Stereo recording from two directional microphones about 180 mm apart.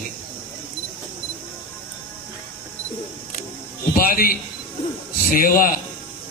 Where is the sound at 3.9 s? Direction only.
55° left (ahead or behind).